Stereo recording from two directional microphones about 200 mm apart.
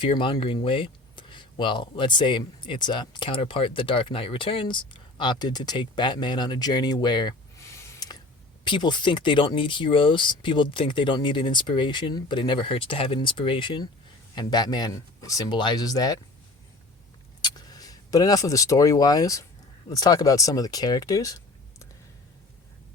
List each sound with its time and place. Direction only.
0.0 s speech: 25° left (ahead or behind)
17.4 s speech: 20° left (ahead or behind)